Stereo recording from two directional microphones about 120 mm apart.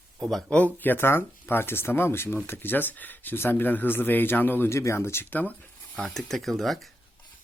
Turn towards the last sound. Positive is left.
turn(degrees=0)  # may be behind; listen again after turning